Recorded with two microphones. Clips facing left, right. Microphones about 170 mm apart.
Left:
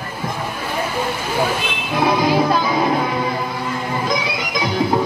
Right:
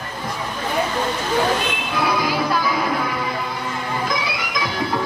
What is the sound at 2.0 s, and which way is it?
Music, 25° left (ahead or behind).